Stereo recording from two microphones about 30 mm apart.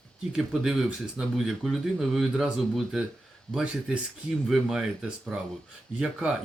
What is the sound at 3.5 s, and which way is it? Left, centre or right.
Speech, left.